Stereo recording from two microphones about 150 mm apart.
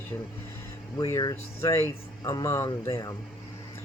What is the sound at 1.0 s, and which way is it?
Speech, 25° left (ahead or behind).